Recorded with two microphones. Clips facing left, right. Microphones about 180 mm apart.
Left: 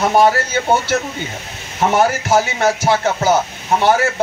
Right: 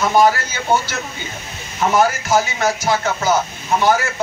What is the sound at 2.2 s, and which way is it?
A man's voice, 30° left (ahead or behind).